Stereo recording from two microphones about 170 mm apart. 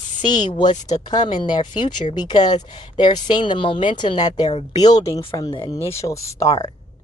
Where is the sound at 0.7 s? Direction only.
45° left (ahead or behind).